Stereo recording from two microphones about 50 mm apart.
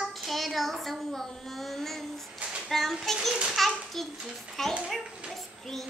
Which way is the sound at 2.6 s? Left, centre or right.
Centre.